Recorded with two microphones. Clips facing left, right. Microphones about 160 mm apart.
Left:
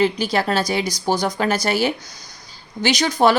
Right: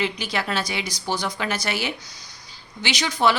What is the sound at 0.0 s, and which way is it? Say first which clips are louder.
Speech: left 7 dB; 40° left (ahead or behind).